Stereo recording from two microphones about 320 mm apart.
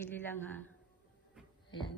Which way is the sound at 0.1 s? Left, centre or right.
Centre.